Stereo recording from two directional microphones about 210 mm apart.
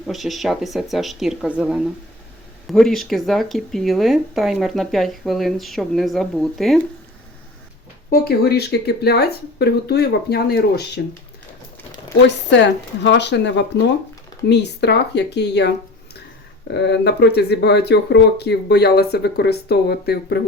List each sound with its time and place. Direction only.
0.1 s speech: centre (ahead or behind)
8.1 s speech: 45° left (ahead or behind)
12.5 s speech: 55° left (ahead or behind)